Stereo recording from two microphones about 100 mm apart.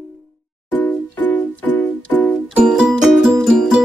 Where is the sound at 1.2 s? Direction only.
15° left (ahead or behind).